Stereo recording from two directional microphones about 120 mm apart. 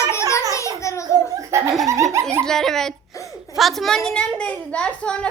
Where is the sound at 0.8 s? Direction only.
25° left (ahead or behind).